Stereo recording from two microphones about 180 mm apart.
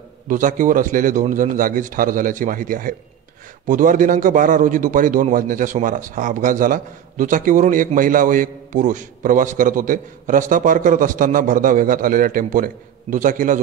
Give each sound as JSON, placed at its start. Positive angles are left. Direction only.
{"t": 0.3, "sound": "a man's voice", "side_deg": -45}